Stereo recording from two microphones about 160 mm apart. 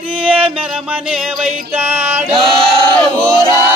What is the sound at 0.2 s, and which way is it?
Music, 10° right (ahead or behind).